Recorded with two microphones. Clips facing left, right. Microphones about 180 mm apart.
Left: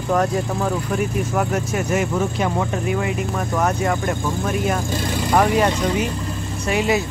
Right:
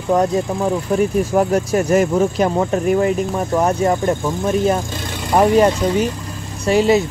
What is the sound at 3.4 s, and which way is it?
Speech, 25° right (ahead or behind).